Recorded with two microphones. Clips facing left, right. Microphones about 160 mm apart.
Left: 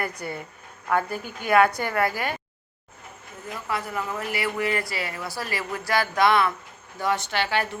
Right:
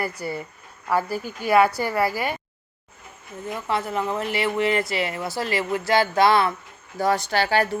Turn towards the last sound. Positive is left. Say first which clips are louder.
# right 4 dB
turn(degrees=-40)  # may be behind; listen again after turning